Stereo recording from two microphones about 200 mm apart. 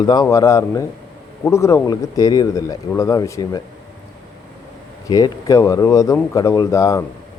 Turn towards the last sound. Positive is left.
turn(degrees=15)  # may be behind; listen again after turning